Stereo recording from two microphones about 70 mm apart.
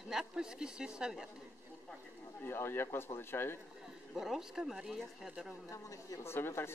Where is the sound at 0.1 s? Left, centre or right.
Centre.